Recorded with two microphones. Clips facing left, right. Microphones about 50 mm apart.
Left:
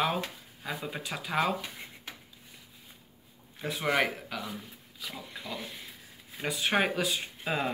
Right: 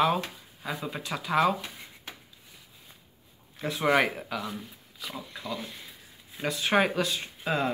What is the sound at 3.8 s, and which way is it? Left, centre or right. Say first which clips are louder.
Speech: right 4 dB; right.